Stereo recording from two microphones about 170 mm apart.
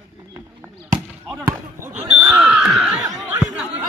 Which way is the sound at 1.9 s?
45° right (ahead or behind).